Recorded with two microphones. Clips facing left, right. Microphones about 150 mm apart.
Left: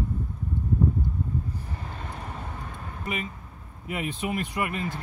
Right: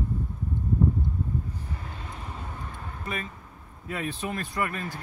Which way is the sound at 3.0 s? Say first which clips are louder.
Left 3 dB; 15° left (ahead or behind).